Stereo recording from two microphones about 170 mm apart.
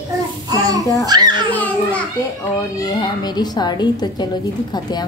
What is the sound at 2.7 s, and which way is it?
A woman's voice, 20° left (ahead or behind).